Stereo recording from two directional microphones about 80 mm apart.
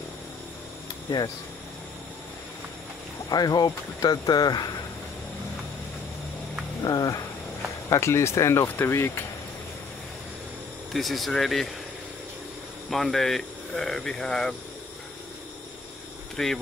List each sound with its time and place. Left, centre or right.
3.3 s speech: left
6.8 s a sound: left
7.9 s speech: left
10.9 s speech: centre
12.9 s speech: centre
16.4 s speech: centre